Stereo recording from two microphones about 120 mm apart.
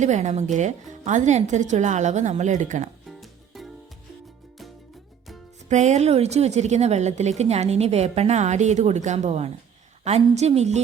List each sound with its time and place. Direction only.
0.0 s a woman's voice: 75° right (ahead or behind)
3.1 s music: centre (ahead or behind)
5.6 s a woman's voice: 75° right (ahead or behind)